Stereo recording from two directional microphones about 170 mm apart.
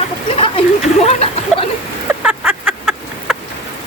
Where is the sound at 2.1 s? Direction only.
5° right (ahead or behind).